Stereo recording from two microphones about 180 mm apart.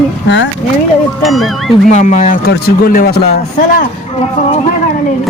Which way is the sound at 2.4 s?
60° left (ahead or behind).